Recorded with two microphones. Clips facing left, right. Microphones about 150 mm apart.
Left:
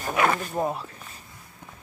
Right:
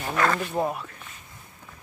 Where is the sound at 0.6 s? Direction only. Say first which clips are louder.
Right 1 dB; 10° right (ahead or behind).